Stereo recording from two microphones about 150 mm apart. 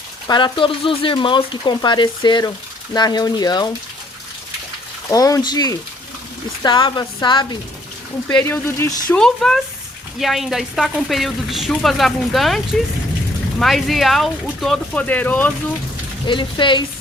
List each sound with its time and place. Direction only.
0.3 s a woman's voice: 30° left (ahead or behind)
5.1 s a woman's voice: 25° left (ahead or behind)
8.3 s speech: 10° left (ahead or behind)
9.1 s a woman's voice: 5° left (ahead or behind)
16.2 s speech: 30° left (ahead or behind)